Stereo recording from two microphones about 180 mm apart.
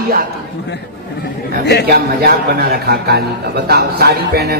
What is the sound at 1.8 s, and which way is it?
A man's voice, 60° right (ahead or behind).